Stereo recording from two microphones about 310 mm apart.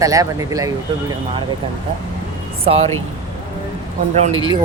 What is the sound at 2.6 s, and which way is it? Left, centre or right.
Speech, centre.